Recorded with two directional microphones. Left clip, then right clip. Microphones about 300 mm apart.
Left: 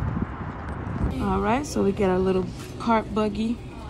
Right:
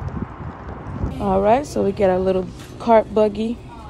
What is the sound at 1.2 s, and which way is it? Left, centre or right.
A woman's voice, centre.